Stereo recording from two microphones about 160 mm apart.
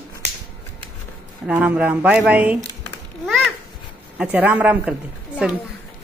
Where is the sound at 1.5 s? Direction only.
5° right (ahead or behind).